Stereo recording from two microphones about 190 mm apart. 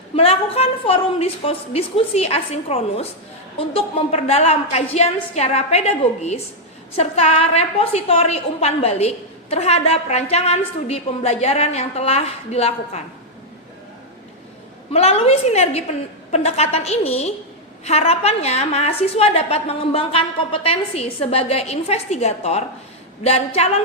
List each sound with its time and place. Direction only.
0.2 s a woman's voice: 30° left (ahead or behind)
14.9 s a woman's voice: 30° left (ahead or behind)